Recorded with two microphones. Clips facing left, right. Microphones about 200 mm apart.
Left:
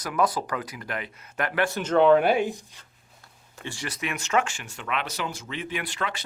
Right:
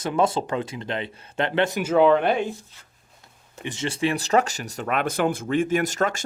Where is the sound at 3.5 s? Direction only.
20° right (ahead or behind); by 6.2 s 45° right (ahead or behind).